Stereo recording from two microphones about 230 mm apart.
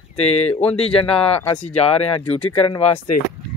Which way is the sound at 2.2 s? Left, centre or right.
Centre.